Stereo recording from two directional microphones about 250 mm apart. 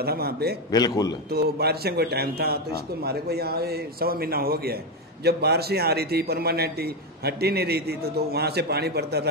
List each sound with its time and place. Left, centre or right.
0.0 s a man's voice: right
0.7 s a man's voice: centre
1.3 s a man's voice: right